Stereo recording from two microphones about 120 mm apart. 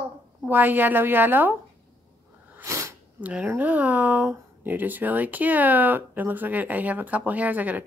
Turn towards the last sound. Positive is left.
turn(degrees=-15)  # may be behind; listen again after turning